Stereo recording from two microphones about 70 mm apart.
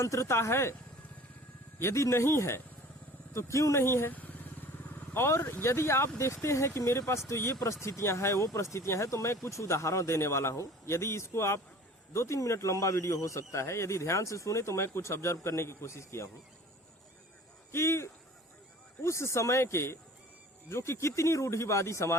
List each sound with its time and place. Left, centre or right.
0.0 s speech: left
1.8 s speech: left
17.7 s speech: left